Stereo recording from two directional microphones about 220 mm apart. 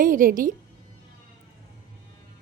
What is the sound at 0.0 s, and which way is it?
Speech, 40° right (ahead or behind).